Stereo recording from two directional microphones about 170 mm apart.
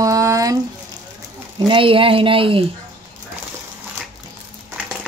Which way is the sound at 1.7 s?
30° right (ahead or behind).